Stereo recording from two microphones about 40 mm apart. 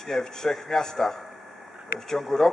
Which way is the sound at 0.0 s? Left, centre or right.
Centre.